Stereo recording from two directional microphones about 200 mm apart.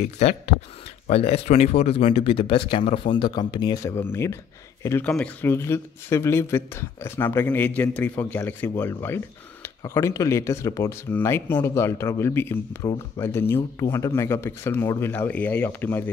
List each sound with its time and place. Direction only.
0.2 s speech: 30° left (ahead or behind); by 16.1 s 10° left (ahead or behind)